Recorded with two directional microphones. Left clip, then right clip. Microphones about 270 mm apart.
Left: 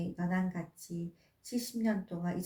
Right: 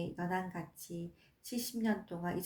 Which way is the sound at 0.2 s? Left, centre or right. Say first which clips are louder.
Left 1 dB; right.